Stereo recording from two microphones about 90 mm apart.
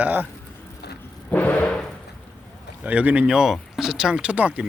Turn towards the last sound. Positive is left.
turn(degrees=-15)  # may be behind; listen again after turning